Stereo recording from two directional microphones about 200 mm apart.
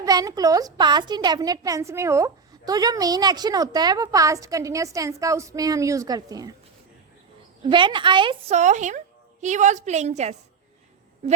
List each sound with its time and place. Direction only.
0.0 s a woman's voice: 15° right (ahead or behind)
7.6 s a woman's voice: 25° right (ahead or behind)